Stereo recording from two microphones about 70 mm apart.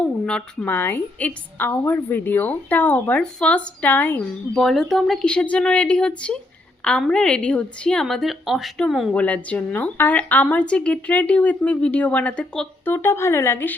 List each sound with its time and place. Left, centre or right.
0.0 s a sound: centre
0.7 s a woman's voice: left
4.5 s speech: centre
5.2 s a woman's voice: centre
8.0 s speech: centre
9.1 s a woman's voice: centre
12.8 s speech: left